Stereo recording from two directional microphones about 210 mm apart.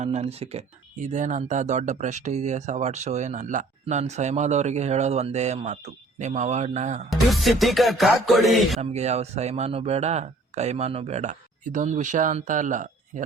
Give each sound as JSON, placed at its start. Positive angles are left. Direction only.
{"t": 0.0, "sound": "speech", "side_deg": -30}
{"t": 7.1, "sound": "music", "side_deg": 0}
{"t": 8.8, "sound": "speech", "side_deg": -30}